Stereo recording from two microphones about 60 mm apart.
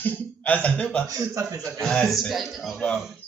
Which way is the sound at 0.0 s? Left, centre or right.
Left.